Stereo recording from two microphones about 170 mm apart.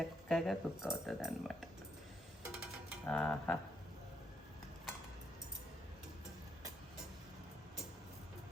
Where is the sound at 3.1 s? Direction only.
5° left (ahead or behind).